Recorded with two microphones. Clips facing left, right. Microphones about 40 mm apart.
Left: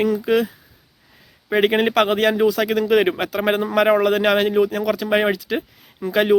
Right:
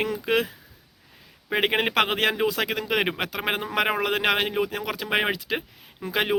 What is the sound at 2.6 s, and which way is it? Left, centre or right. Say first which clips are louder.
Speech: left 8 dB; centre.